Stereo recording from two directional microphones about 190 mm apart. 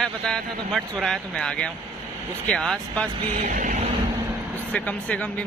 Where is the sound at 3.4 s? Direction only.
40° right (ahead or behind).